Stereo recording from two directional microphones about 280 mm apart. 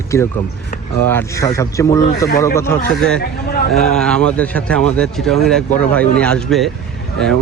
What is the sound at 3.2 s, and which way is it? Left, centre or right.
Speech, left.